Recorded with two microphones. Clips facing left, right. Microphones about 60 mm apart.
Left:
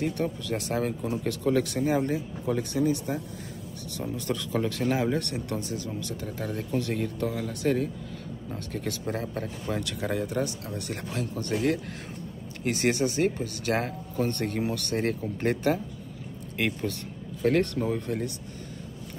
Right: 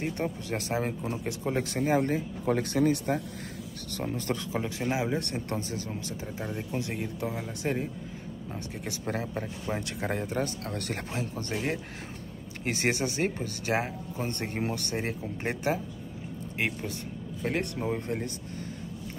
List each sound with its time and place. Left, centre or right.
0.0 s speech: right
2.0 s speech: right
3.9 s speech: right
4.5 s speech: centre
5.2 s speech: right
6.3 s speech: centre
9.0 s speech: right
11.1 s speech: right
12.6 s speech: right
15.0 s speech: centre
17.8 s speech: right